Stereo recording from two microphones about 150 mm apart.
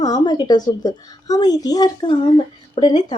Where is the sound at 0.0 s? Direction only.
25° left (ahead or behind).